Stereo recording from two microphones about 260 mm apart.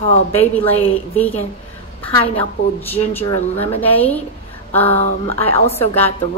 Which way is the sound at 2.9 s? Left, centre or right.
Centre.